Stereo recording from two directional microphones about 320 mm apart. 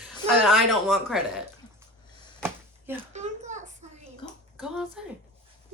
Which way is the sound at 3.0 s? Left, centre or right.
Right.